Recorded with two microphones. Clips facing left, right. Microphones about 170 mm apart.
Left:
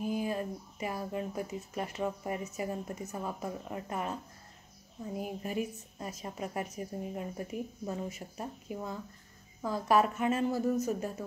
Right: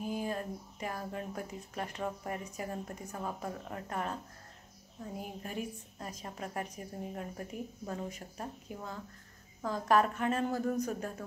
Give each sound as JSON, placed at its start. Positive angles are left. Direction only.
{"t": 0.1, "sound": "speech", "side_deg": 5}
{"t": 5.2, "sound": "speech", "side_deg": 5}